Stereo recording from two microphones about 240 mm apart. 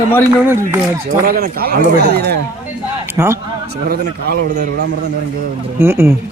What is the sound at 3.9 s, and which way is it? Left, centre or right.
Speech, right.